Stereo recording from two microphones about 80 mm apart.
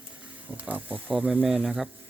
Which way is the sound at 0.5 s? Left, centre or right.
Centre.